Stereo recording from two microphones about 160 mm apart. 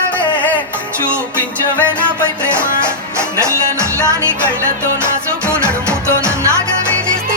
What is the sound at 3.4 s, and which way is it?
Music, 15° right (ahead or behind).